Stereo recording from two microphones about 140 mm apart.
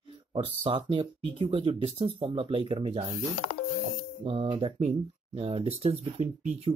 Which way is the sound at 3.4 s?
50° left (ahead or behind).